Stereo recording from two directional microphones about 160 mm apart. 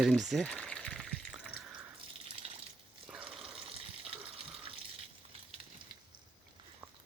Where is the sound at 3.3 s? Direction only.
5° right (ahead or behind).